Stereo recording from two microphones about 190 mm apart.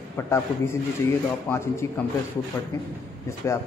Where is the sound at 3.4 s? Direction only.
15° left (ahead or behind).